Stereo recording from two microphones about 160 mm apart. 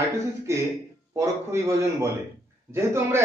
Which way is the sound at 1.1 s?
20° right (ahead or behind).